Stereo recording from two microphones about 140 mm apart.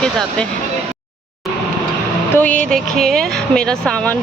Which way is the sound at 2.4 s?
10° left (ahead or behind).